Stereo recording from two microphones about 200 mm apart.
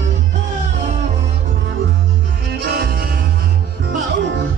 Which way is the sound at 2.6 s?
50° right (ahead or behind).